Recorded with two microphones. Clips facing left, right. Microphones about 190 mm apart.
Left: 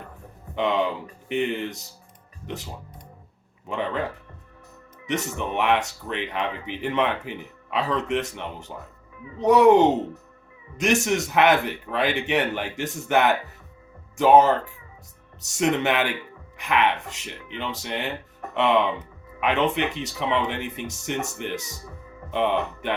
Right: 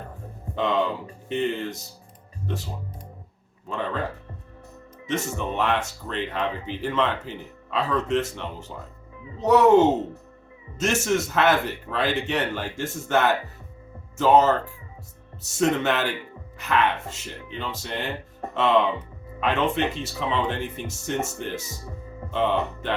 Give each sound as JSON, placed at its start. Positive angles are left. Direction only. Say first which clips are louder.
{"t": 0.5, "sound": "a man's voice", "louder": "even", "side_deg": 15}
{"t": 3.7, "sound": "a man's voice", "louder": "left 2 dB", "side_deg": 15}
{"t": 5.0, "sound": "a man's voice", "louder": "even", "side_deg": 15}
{"t": 15.5, "sound": "a man's voice", "louder": "even", "side_deg": 15}